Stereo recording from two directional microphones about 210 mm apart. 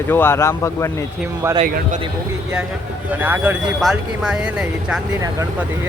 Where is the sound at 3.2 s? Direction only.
10° right (ahead or behind).